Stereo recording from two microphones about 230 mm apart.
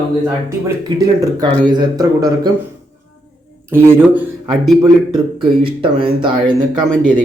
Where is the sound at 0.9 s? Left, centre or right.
Centre.